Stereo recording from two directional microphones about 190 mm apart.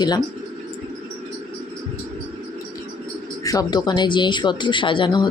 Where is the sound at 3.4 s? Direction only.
20° left (ahead or behind).